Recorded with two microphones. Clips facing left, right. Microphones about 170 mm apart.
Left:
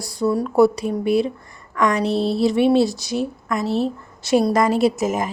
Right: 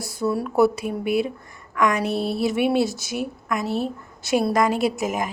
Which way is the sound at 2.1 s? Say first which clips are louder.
Left 4 dB; 30° left (ahead or behind).